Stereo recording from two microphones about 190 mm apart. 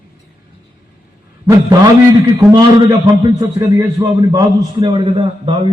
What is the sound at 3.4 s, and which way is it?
A man's voice, 20° right (ahead or behind).